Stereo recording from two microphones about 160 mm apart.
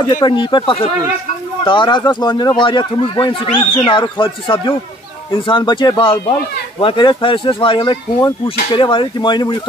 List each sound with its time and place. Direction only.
0.1 s speech: 30° left (ahead or behind)